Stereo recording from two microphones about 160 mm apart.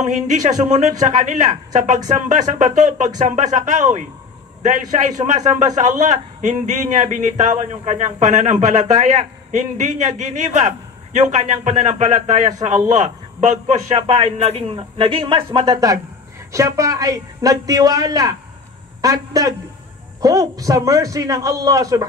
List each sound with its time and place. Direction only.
0.7 s a man's voice: 45° right (ahead or behind)
15.7 s a man's voice: 20° right (ahead or behind)